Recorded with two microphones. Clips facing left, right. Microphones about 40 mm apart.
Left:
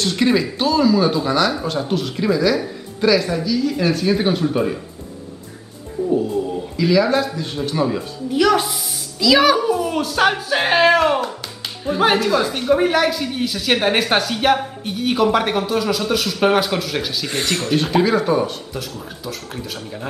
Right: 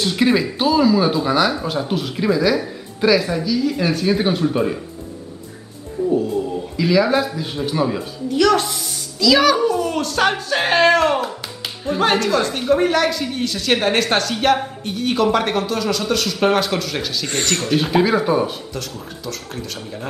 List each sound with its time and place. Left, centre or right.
0.0 s a woman's voice: centre
6.0 s a woman's voice: centre
8.3 s a woman's voice: centre
18.7 s speech: centre